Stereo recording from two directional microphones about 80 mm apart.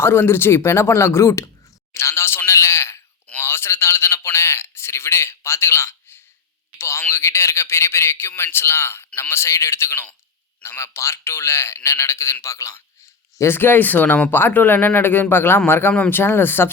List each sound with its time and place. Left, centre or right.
0.0 s a man's voice: left
13.4 s speech: left